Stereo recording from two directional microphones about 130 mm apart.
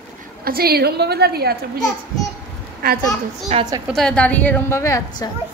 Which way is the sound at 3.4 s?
65° right (ahead or behind).